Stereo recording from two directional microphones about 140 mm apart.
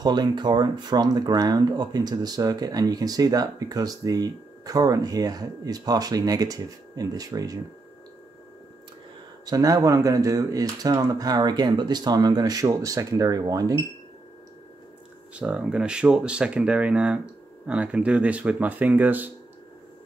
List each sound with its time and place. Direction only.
0.0 s speech: 30° right (ahead or behind)
9.5 s speech: 25° right (ahead or behind)
15.3 s speech: 10° right (ahead or behind)